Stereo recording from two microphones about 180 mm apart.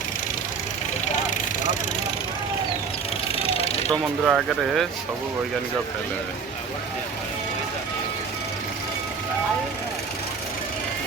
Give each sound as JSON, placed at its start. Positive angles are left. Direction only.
{"t": 1.0, "sound": "vehicle", "side_deg": 40}
{"t": 3.3, "sound": "vehicle", "side_deg": 35}
{"t": 4.3, "sound": "speech", "side_deg": 0}